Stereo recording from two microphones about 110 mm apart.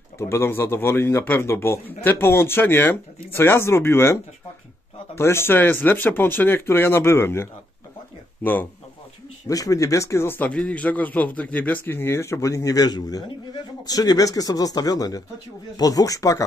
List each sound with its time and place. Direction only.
0.2 s a man's voice: 20° left (ahead or behind)
9.5 s a man's voice: 30° left (ahead or behind)